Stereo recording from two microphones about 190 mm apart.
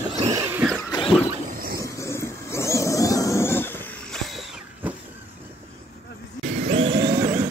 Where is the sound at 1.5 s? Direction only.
50° right (ahead or behind).